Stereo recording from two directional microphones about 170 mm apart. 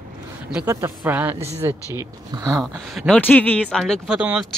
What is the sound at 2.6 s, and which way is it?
Speech, 5° right (ahead or behind).